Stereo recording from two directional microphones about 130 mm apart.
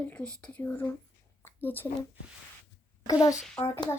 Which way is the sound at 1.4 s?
15° left (ahead or behind).